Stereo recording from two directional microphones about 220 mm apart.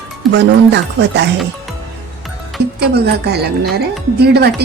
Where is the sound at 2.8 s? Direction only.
45° right (ahead or behind).